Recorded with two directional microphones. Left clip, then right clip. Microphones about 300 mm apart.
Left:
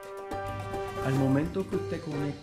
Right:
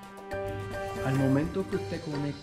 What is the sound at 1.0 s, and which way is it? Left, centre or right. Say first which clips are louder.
Speech: even; centre.